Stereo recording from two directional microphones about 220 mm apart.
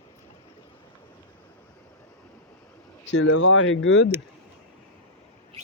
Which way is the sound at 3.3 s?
70° left (ahead or behind).